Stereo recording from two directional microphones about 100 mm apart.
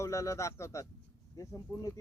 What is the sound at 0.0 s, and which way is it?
Speech, 30° left (ahead or behind).